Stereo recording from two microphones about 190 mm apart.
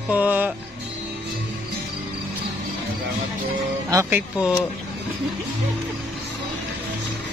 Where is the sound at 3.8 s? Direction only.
15° right (ahead or behind).